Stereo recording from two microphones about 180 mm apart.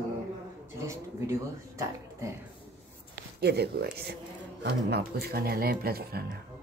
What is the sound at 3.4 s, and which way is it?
Speech, 65° right (ahead or behind).